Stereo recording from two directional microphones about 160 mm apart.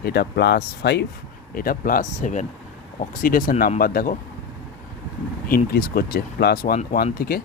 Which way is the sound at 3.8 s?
65° left (ahead or behind).